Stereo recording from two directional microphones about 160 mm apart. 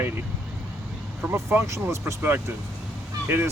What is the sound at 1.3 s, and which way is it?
Speech, 15° right (ahead or behind).